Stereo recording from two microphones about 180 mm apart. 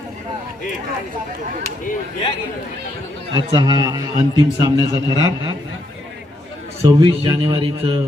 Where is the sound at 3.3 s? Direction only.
25° right (ahead or behind).